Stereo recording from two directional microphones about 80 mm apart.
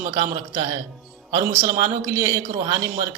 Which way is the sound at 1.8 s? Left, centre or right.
Right.